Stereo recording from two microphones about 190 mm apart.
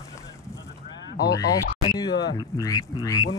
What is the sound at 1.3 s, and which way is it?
Speech, 20° left (ahead or behind).